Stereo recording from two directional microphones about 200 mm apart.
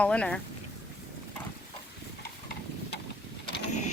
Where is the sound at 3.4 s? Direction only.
55° left (ahead or behind).